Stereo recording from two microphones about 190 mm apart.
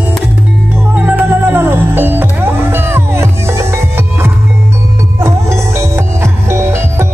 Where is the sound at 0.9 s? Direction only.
10° right (ahead or behind).